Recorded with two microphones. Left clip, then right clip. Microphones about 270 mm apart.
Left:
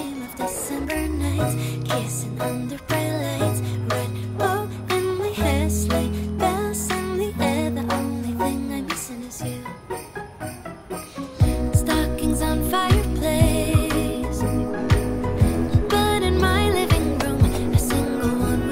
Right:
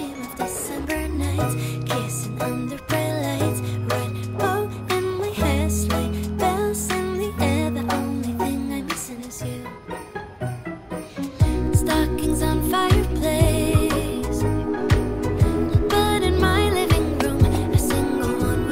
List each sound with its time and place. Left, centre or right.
0.4 s music: centre
11.4 s music: centre